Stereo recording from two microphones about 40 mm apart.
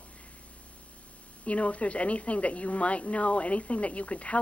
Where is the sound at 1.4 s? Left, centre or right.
Left.